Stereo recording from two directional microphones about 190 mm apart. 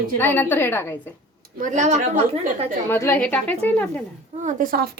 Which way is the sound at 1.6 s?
40° right (ahead or behind).